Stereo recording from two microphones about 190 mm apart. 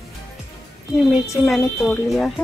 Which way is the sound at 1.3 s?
Centre (ahead or behind).